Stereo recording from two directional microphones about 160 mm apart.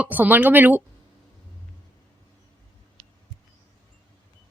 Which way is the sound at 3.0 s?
40° right (ahead or behind).